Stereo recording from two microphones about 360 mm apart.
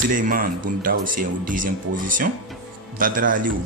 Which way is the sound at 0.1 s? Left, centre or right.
Right.